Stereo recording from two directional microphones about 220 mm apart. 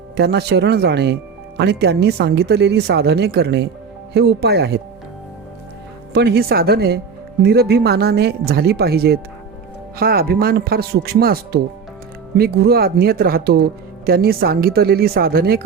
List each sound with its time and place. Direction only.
0.2 s speech: 50° right (ahead or behind)
6.1 s speech: 45° right (ahead or behind)